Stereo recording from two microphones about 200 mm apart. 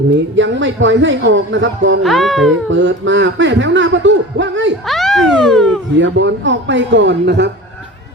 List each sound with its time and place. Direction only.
0.3 s speech: 70° right (ahead or behind)
2.0 s speech: centre (ahead or behind)
2.6 s speech: 70° right (ahead or behind)
4.9 s speech: centre (ahead or behind)
6.0 s a man's voice: 65° right (ahead or behind)